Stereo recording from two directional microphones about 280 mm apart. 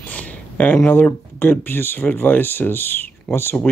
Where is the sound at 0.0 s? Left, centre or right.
Centre.